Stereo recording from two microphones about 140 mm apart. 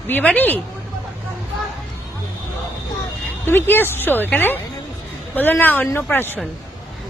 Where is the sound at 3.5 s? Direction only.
15° left (ahead or behind).